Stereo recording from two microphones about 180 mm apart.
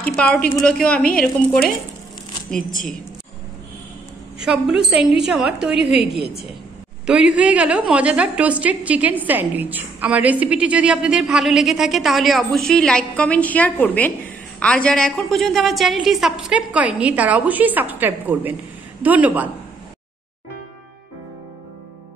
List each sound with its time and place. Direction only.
0.0 s a woman's voice: 5° left (ahead or behind)
4.4 s a woman's voice: 5° right (ahead or behind)
5.9 s a woman's voice: 65° right (ahead or behind)
7.1 s a woman's voice: 5° right (ahead or behind)